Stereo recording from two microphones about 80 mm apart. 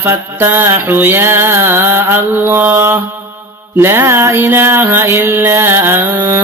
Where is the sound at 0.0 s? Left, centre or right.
Right.